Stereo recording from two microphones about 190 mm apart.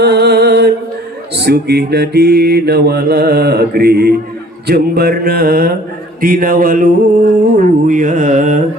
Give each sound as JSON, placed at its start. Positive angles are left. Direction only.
{"t": 0.0, "sound": "mantra", "side_deg": -60}